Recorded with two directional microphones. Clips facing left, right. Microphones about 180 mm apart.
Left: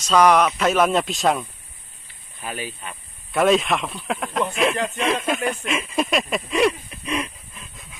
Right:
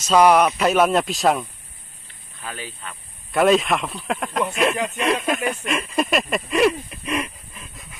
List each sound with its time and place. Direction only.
0.0 s speech: 5° right (ahead or behind)
2.4 s speech: 15° left (ahead or behind)
3.3 s speech: centre (ahead or behind)